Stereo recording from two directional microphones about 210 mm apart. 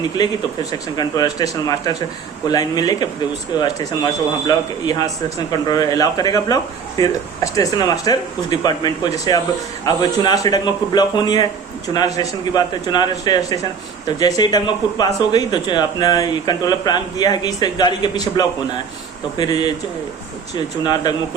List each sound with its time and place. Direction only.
0.2 s a man's voice: 20° left (ahead or behind)
20.8 s a man's voice: 20° left (ahead or behind)